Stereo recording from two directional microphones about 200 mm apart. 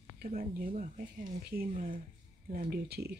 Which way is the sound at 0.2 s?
45° right (ahead or behind).